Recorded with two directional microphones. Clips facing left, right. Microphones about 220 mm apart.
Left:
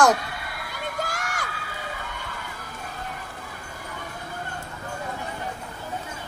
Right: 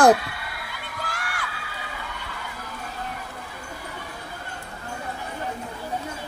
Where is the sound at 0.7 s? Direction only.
45° left (ahead or behind).